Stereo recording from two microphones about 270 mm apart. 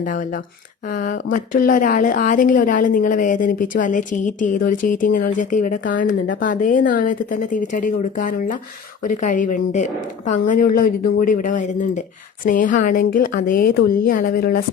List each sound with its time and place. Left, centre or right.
0.9 s a woman's voice: left